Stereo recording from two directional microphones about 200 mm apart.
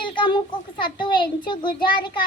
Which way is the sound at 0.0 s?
25° left (ahead or behind).